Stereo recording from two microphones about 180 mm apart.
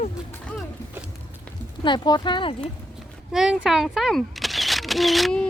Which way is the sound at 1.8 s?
25° left (ahead or behind).